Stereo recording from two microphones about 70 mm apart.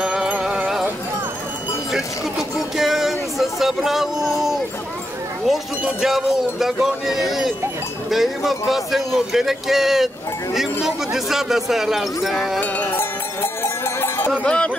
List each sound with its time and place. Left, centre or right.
0.0 s music: centre
1.9 s speech: centre
5.9 s speech: centre
12.5 s music: left
13.4 s cowbell: left
14.4 s speech: centre